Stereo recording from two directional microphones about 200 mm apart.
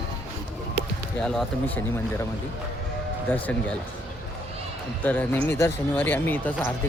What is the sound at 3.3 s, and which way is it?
Speech, 5° left (ahead or behind).